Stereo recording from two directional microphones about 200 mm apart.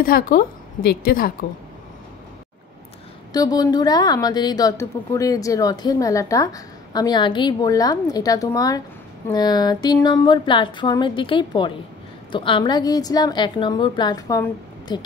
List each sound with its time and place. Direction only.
0.0 s a woman's voice: 45° left (ahead or behind)
3.3 s a woman's voice: 20° left (ahead or behind)